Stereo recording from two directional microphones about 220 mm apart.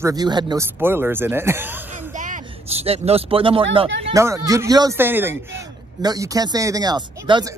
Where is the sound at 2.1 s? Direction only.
35° right (ahead or behind).